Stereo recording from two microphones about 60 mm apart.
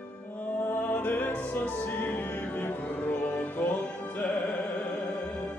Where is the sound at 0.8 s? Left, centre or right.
Left.